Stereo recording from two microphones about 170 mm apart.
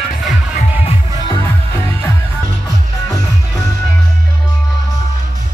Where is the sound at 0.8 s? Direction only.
25° left (ahead or behind).